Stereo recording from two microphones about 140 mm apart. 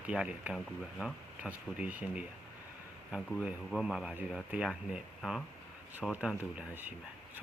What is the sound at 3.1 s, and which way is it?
Speech, 5° right (ahead or behind).